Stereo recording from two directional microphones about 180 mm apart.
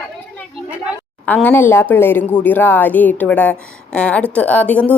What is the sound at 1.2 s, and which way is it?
Speech, 10° left (ahead or behind).